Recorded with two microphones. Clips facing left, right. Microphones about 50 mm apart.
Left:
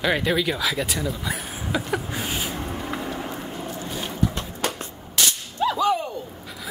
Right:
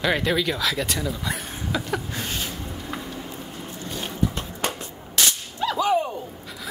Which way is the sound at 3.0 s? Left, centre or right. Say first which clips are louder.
Left 5 dB; left.